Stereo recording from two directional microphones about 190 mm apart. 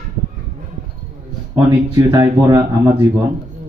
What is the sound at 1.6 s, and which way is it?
Speech, 20° right (ahead or behind).